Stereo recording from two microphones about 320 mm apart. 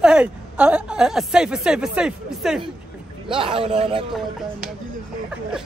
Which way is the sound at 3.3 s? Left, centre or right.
Centre.